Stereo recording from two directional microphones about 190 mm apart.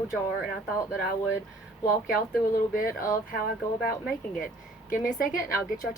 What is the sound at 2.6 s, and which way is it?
Speech, 50° left (ahead or behind).